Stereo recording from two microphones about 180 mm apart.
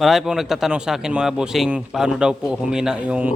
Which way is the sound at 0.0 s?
Centre (ahead or behind).